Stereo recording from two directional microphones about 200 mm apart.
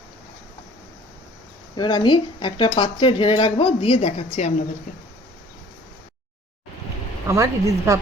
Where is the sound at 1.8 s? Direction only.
25° left (ahead or behind).